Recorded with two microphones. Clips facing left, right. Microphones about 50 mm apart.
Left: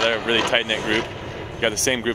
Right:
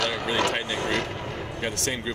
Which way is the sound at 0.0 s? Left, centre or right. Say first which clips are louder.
Left 5 dB; left.